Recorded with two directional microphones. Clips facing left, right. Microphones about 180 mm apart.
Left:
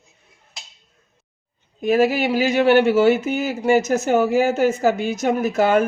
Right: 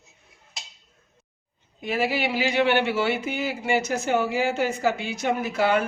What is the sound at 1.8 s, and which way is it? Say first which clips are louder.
Speech: left 8 dB; 45° left (ahead or behind).